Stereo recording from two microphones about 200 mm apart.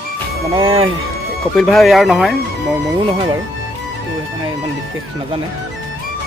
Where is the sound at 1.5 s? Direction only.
Centre (ahead or behind).